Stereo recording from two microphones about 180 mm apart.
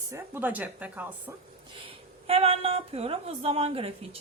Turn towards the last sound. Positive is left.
turn(degrees=-35)  # may be behind; listen again after turning